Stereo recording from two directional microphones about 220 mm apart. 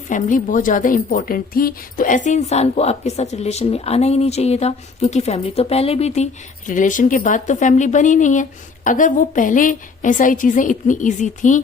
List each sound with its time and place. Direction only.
0.1 s a woman's voice: 35° left (ahead or behind)